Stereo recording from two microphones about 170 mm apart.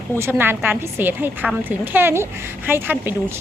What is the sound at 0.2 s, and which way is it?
A woman's voice, 10° right (ahead or behind).